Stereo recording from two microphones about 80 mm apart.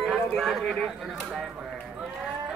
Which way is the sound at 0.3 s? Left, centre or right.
Centre.